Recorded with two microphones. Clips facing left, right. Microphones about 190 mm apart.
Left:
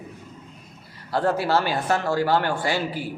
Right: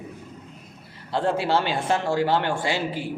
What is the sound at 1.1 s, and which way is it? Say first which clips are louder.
A man's voice: left 1 dB; 25° right (ahead or behind).